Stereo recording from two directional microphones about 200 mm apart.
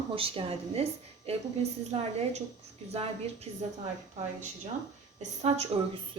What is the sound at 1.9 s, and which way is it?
A woman's voice, 30° right (ahead or behind).